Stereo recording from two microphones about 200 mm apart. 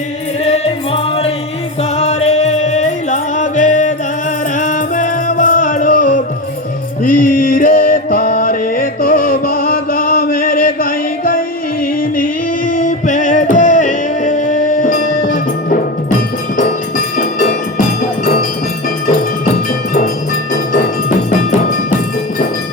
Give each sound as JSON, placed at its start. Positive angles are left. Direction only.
{"t": 0.4, "sound": "music", "side_deg": 30}
{"t": 17.2, "sound": "music", "side_deg": 40}
{"t": 19.5, "sound": "music", "side_deg": 45}